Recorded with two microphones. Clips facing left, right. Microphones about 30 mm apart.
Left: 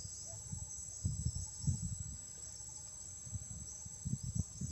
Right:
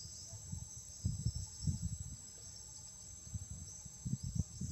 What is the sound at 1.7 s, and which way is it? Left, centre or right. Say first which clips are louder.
Squeal: left 1 dB; right.